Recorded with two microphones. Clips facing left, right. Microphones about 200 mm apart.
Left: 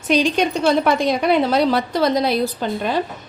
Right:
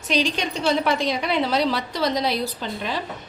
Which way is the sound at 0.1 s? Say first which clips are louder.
Left 6 dB; 55° left (ahead or behind).